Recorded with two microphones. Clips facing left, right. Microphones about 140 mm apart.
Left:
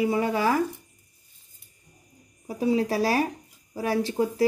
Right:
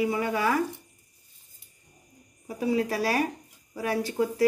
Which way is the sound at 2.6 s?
30° left (ahead or behind).